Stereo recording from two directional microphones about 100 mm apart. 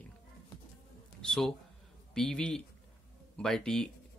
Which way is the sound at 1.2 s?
5° left (ahead or behind).